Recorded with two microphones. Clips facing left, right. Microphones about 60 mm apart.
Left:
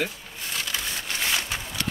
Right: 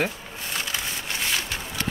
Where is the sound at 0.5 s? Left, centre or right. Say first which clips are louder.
Right 1 dB; right.